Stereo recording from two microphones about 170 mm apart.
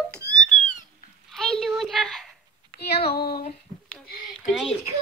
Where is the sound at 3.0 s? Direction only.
65° left (ahead or behind).